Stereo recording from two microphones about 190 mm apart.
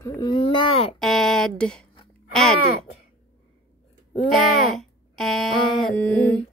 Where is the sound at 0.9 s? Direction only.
Centre (ahead or behind).